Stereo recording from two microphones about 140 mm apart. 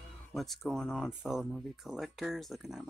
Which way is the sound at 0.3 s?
Centre (ahead or behind).